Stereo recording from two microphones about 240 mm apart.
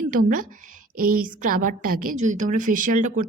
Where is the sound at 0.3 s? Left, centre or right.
Right.